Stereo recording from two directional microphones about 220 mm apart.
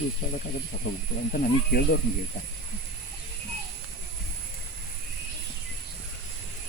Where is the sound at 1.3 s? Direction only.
40° left (ahead or behind).